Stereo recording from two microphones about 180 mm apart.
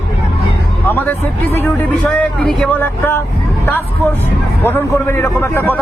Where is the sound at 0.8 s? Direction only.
10° left (ahead or behind).